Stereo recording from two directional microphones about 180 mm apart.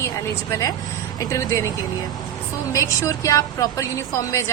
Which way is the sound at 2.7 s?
20° left (ahead or behind).